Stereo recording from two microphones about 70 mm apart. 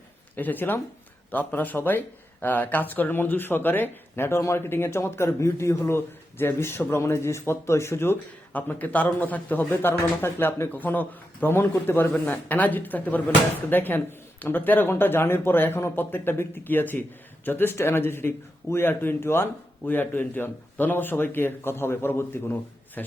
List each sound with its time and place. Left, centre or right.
0.3 s speech: left
8.5 s speech: left
23.0 s speech: left